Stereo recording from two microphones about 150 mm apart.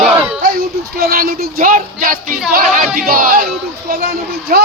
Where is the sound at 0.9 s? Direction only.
85° right; by 3.9 s 65° right (ahead or behind).